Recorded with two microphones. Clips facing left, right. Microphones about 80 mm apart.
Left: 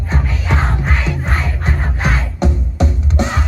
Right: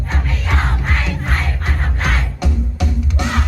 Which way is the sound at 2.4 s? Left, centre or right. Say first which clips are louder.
Left 4 dB; left.